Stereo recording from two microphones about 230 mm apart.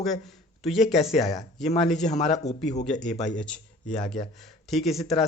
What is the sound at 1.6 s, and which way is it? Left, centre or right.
Speech, left.